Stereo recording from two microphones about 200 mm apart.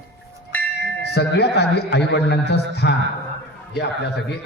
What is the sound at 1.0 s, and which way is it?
A man's voice, 55° left (ahead or behind).